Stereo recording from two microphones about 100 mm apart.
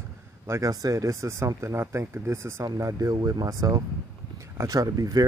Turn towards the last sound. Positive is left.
turn(degrees=-35)  # may be behind; listen again after turning